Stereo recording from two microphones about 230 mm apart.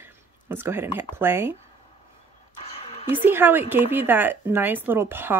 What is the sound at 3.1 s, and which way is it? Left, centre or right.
Speech, centre.